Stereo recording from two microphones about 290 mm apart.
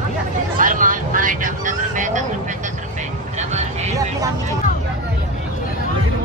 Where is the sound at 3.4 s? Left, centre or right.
Right.